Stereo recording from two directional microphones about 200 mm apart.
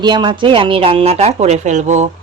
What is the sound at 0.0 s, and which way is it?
Speech, 20° right (ahead or behind).